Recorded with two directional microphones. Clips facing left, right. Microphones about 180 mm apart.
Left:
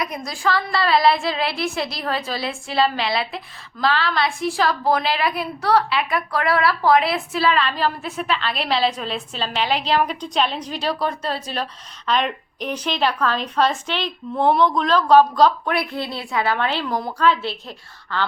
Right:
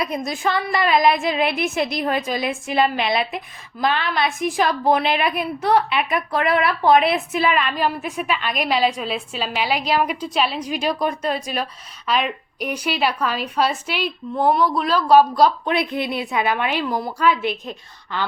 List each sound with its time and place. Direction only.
0.0 s a woman's voice: 25° right (ahead or behind)